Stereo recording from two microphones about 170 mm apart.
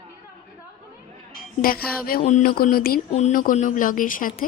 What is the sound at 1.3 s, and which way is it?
Music, 60° left (ahead or behind).